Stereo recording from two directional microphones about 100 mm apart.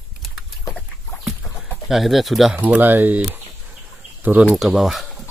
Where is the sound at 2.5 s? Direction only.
20° right (ahead or behind).